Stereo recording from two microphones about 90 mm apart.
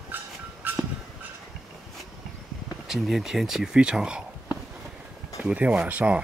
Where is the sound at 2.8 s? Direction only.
5° right (ahead or behind).